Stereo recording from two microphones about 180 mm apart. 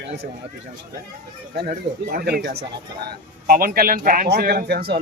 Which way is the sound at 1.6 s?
60° right (ahead or behind).